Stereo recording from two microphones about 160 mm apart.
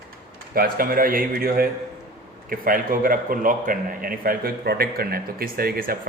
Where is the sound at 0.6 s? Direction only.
65° right (ahead or behind).